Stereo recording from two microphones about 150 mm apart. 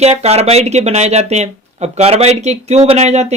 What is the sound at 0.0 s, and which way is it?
Speech, 45° right (ahead or behind).